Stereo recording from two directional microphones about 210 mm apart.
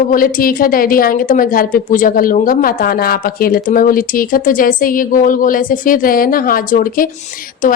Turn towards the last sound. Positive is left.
turn(degrees=40)  # may be behind; listen again after turning